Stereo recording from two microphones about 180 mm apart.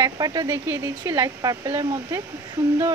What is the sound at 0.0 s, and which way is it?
Speech, 20° right (ahead or behind).